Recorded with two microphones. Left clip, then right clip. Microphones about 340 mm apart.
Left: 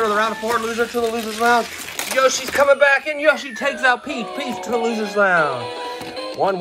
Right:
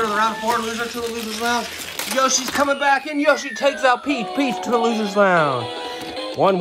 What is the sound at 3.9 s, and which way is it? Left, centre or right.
Speech, right.